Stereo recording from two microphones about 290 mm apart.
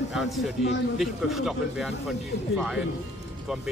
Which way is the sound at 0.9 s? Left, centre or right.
Centre.